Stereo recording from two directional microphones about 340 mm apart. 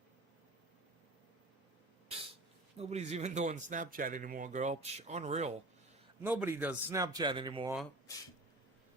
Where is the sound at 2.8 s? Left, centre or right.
Centre.